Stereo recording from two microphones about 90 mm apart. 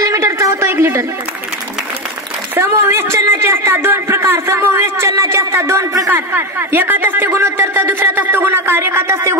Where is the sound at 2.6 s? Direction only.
30° right (ahead or behind).